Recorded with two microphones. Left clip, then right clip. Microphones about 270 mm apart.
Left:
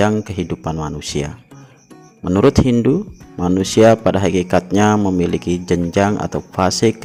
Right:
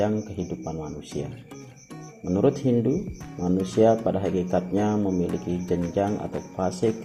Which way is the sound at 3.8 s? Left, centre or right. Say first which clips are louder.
Left 9 dB; left.